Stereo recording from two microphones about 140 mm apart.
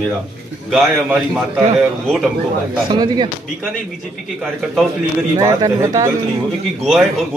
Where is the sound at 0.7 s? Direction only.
5° right (ahead or behind).